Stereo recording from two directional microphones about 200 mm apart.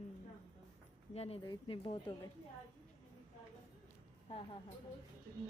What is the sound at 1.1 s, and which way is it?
Speech, 30° left (ahead or behind).